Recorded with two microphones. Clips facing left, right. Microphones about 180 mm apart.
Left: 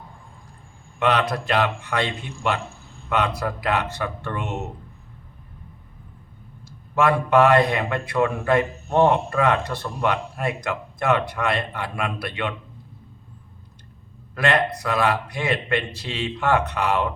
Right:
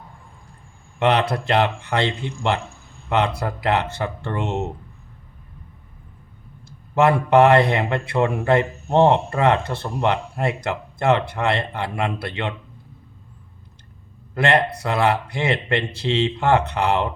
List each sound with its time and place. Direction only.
0.9 s a man's voice: 25° right (ahead or behind)
6.7 s a man's voice: 25° right (ahead or behind)
14.3 s a man's voice: 25° right (ahead or behind)